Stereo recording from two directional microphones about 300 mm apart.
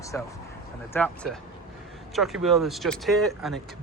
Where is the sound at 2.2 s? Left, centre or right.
Centre.